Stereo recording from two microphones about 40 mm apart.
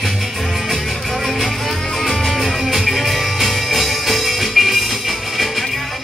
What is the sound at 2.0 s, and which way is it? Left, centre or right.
Music, centre.